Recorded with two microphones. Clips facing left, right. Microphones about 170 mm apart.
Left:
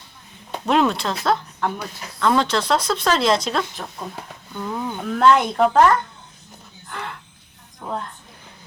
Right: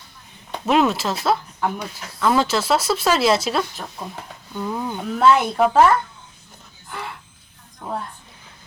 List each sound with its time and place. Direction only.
0.5 s speech: 5° right (ahead or behind)